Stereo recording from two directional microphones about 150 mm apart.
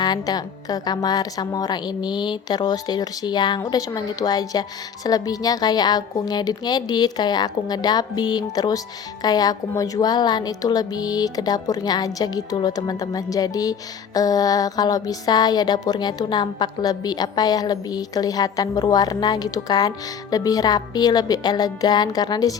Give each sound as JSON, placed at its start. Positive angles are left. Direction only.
{"t": 0.0, "sound": "a woman's voice", "side_deg": 25}